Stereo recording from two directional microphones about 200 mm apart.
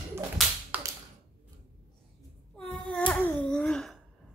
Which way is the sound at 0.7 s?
10° right (ahead or behind).